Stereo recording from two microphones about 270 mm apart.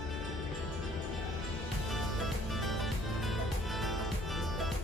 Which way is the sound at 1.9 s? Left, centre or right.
Centre.